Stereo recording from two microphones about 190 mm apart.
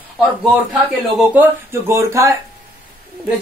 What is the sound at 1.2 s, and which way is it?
A man's voice, 10° right (ahead or behind).